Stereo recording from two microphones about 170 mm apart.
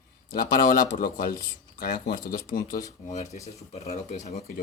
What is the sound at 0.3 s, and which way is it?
Speech, 55° left (ahead or behind).